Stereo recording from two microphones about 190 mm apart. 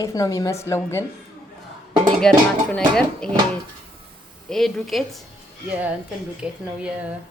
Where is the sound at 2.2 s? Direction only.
5° left (ahead or behind).